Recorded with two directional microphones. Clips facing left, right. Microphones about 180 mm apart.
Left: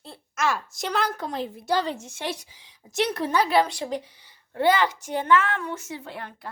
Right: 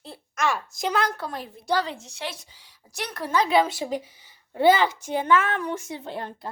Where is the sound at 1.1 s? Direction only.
20° left (ahead or behind).